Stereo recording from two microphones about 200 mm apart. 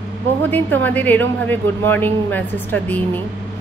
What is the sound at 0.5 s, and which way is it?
A woman's voice, 10° left (ahead or behind).